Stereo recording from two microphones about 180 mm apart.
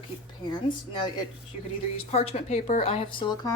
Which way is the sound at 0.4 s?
25° left (ahead or behind).